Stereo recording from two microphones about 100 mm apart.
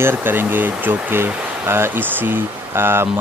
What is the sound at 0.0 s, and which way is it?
Speech, 20° right (ahead or behind).